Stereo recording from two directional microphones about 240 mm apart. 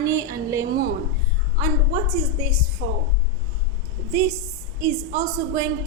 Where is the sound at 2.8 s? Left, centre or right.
Right.